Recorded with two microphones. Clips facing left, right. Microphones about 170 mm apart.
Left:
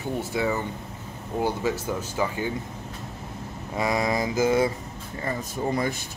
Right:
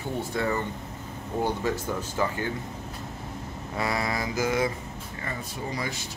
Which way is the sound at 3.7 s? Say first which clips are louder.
Left 4 dB; 15° left (ahead or behind).